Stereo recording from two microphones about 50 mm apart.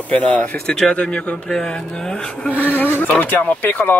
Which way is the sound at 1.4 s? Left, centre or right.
Centre.